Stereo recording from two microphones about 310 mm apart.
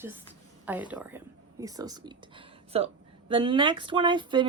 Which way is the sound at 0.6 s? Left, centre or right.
Centre.